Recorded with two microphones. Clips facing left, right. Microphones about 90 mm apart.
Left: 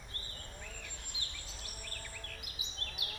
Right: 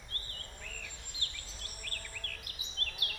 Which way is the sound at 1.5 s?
15° left (ahead or behind).